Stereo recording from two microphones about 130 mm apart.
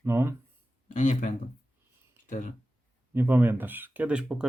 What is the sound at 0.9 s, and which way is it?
Speech, 70° left (ahead or behind).